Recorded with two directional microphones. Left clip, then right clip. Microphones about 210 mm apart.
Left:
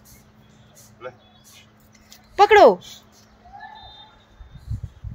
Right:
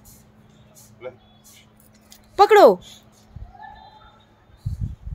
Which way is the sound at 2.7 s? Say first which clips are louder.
Left 1 dB; 5° left (ahead or behind).